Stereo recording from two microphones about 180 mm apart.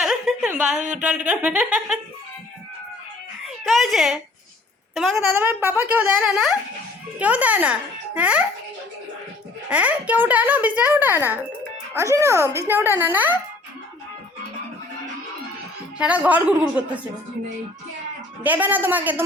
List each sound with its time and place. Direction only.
0.0 s a sound: centre (ahead or behind)
0.8 s a sound: 45° right (ahead or behind)
1.0 s speech: 5° right (ahead or behind)
3.7 s speech: centre (ahead or behind)
5.3 s speech: 10° right (ahead or behind)
9.6 s speech: 5° right (ahead or behind)
16.0 s speech: 5° right (ahead or behind)
18.4 s speech: 10° right (ahead or behind)